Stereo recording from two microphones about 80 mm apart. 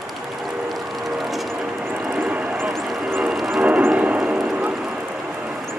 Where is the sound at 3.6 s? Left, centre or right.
Centre.